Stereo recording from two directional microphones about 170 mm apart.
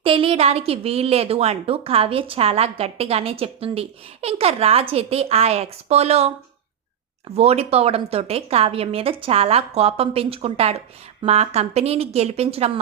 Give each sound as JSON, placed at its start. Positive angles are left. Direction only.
{"t": 0.0, "sound": "a woman's voice", "side_deg": -30}